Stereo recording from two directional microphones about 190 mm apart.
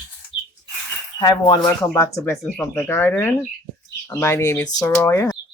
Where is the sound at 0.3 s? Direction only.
25° left (ahead or behind).